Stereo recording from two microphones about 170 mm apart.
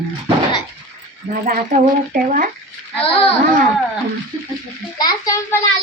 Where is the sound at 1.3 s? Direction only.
55° right (ahead or behind).